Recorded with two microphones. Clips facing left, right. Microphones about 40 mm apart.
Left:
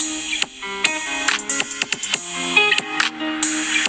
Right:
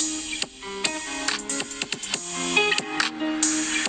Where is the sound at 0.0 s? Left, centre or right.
Left.